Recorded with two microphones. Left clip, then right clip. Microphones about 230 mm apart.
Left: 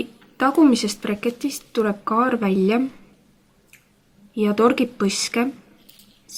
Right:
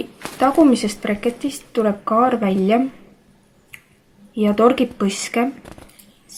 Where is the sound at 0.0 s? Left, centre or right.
Left.